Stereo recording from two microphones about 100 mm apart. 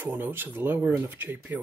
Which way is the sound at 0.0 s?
20° right (ahead or behind).